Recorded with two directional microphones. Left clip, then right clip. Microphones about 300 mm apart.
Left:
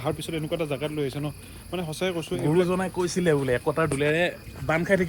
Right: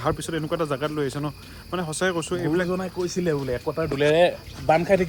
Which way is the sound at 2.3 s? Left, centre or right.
Left.